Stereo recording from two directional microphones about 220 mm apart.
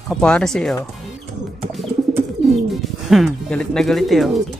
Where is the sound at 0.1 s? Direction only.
5° left (ahead or behind).